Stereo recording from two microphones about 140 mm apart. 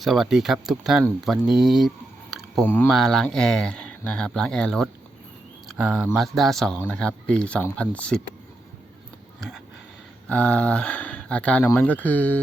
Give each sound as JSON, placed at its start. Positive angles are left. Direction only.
{"t": 0.0, "sound": "speech", "side_deg": 0}
{"t": 2.6, "sound": "speech", "side_deg": 15}
{"t": 10.2, "sound": "speech", "side_deg": 10}